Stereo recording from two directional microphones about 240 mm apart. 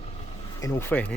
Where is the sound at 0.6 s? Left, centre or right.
Centre.